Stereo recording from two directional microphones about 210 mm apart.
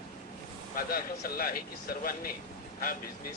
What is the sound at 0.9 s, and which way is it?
Speech, 45° left (ahead or behind).